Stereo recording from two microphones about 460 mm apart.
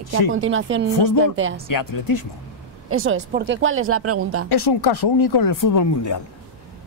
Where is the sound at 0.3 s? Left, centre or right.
Right.